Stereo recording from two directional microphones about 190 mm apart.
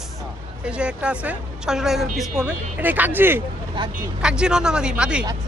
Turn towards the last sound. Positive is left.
turn(degrees=-5)  # may be behind; listen again after turning